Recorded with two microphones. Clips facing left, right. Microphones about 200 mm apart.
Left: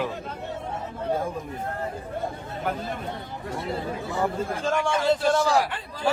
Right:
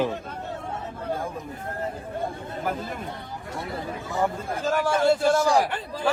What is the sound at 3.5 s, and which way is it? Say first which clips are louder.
Speech: left 2 dB; 25° left (ahead or behind).